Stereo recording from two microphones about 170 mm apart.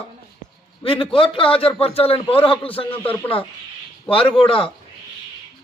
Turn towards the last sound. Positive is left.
turn(degrees=30)  # may be behind; listen again after turning